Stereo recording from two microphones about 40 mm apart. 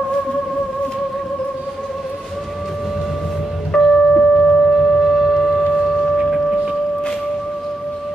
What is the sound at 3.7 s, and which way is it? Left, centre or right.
Music, centre.